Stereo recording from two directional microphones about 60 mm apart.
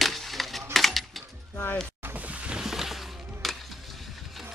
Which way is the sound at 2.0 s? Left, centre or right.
Right.